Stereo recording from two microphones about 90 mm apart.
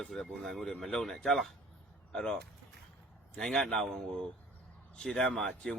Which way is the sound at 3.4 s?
5° left (ahead or behind).